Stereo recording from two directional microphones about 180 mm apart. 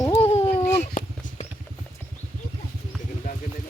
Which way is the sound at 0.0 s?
20° left (ahead or behind).